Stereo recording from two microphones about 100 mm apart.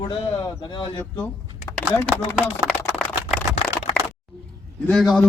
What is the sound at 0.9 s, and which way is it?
Speech, 20° left (ahead or behind).